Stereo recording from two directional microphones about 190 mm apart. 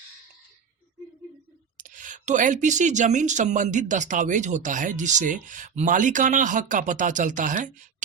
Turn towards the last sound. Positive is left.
turn(degrees=-40)  # may be behind; listen again after turning